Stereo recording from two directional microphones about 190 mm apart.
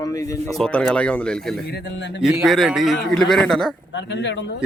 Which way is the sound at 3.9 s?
70° left (ahead or behind).